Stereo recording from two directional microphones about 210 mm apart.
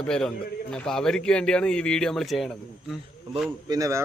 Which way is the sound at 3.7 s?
15° right (ahead or behind).